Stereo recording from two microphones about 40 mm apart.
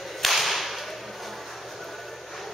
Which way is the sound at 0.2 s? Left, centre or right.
Centre.